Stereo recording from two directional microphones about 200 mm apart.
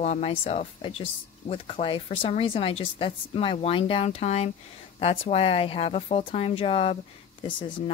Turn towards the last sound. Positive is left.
turn(degrees=25)  # may be behind; listen again after turning